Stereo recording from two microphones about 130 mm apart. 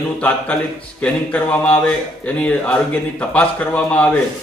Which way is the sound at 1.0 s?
10° left (ahead or behind).